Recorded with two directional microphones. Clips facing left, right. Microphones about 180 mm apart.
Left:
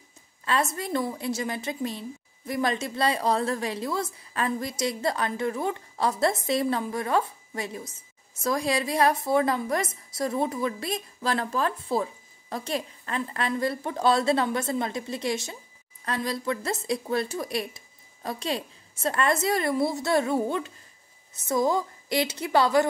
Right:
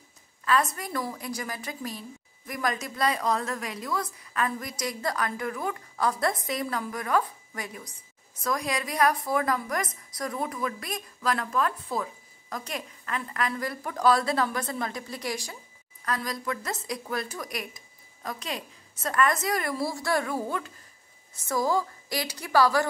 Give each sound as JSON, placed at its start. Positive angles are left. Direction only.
{"t": 0.5, "sound": "a woman's voice", "side_deg": 25}